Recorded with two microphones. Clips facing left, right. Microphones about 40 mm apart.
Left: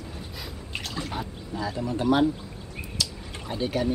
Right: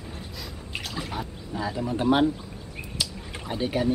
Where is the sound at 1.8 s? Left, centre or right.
Right.